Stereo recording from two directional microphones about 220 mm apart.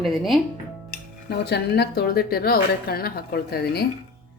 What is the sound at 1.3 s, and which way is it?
Speech, 45° left (ahead or behind).